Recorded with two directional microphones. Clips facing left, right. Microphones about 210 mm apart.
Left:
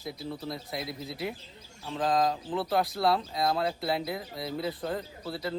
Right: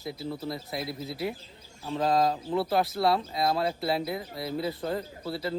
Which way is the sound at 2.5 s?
5° right (ahead or behind).